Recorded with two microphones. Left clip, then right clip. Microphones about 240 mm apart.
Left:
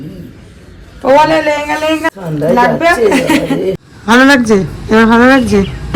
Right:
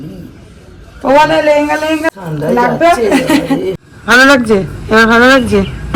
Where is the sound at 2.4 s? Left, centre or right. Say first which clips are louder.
Even; centre.